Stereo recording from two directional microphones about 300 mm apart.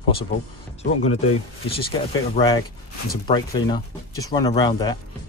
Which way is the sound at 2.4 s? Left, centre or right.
Left.